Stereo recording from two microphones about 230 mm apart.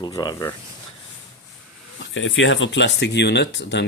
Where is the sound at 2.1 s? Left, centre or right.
Left.